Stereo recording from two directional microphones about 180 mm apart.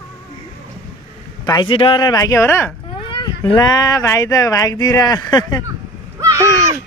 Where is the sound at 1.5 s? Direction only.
25° left (ahead or behind).